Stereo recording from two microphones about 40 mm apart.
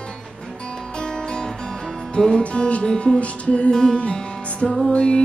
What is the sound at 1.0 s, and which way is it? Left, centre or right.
Music, centre.